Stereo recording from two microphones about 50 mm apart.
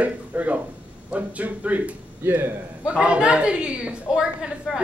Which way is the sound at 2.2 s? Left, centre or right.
Right.